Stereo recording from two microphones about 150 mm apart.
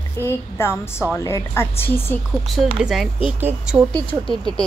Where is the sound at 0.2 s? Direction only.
15° left (ahead or behind).